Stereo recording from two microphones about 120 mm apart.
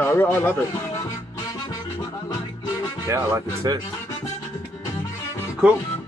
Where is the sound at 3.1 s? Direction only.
25° right (ahead or behind).